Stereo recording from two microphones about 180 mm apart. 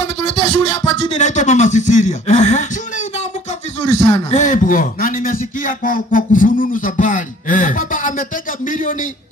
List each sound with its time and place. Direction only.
0.0 s music: 30° left (ahead or behind)
1.1 s speech: 40° left (ahead or behind)
3.9 s a man's voice: 40° left (ahead or behind)